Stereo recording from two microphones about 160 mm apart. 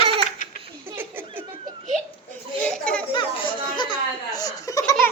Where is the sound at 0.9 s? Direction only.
15° right (ahead or behind).